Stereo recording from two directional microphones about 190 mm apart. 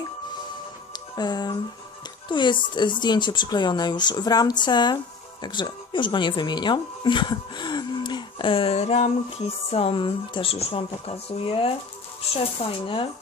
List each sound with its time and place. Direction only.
1.1 s speech: 20° left (ahead or behind)